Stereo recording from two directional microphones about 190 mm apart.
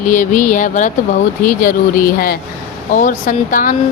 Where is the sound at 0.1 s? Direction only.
40° left (ahead or behind).